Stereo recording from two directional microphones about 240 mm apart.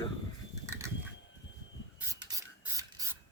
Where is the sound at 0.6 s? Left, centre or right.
Centre.